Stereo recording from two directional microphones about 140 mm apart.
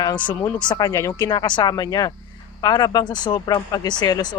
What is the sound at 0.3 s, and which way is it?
Speech, 10° left (ahead or behind).